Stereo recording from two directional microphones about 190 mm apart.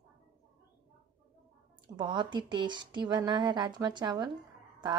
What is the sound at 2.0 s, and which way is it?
Speech, 25° right (ahead or behind).